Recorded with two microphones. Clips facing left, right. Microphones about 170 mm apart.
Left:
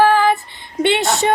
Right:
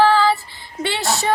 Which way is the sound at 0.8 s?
20° left (ahead or behind).